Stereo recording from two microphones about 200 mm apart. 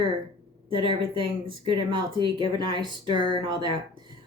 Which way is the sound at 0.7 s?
25° right (ahead or behind).